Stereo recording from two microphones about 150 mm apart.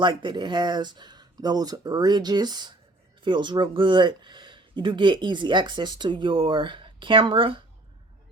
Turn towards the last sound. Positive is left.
turn(degrees=-35)  # may be behind; listen again after turning